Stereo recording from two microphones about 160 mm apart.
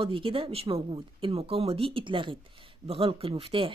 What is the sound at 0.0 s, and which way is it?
Speech, 35° right (ahead or behind).